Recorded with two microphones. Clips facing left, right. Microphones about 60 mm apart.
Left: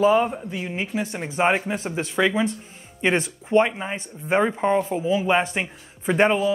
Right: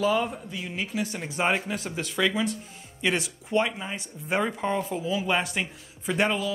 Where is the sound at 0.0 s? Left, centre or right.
Left.